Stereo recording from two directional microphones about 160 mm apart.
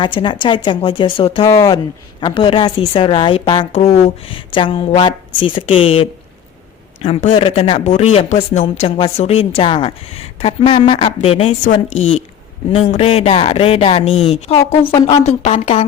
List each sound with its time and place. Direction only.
0.0 s a woman's voice: 30° left (ahead or behind)
1.5 s speech: 20° left (ahead or behind)
2.2 s a woman's voice: 30° left (ahead or behind)
3.7 s a woman's voice: 40° left (ahead or behind)